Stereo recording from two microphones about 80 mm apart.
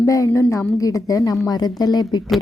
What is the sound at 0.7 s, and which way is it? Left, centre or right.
Speech, left.